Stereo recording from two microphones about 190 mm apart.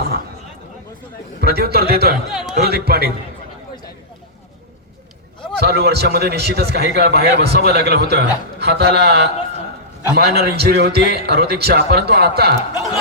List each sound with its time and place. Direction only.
1.4 s a man's voice: 55° right (ahead or behind)
2.3 s speech: centre (ahead or behind)
2.6 s a man's voice: 55° right (ahead or behind)
5.5 s a man's voice: 55° right (ahead or behind)